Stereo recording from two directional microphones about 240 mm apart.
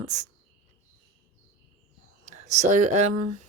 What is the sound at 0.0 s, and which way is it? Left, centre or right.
Speech, right.